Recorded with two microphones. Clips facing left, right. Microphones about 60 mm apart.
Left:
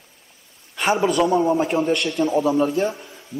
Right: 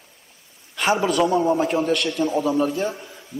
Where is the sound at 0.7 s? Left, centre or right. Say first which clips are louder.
Left 1 dB; centre.